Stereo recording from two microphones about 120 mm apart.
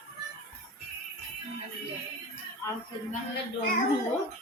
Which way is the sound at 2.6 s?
20° left (ahead or behind).